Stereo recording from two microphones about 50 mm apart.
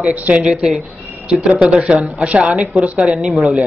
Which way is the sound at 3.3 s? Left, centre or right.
Centre.